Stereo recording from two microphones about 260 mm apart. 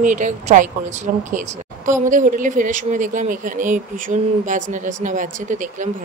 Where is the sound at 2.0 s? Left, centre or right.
Right.